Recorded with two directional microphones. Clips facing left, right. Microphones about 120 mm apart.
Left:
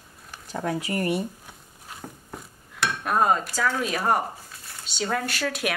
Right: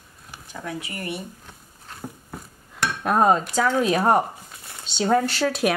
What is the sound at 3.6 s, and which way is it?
Speech, 25° right (ahead or behind).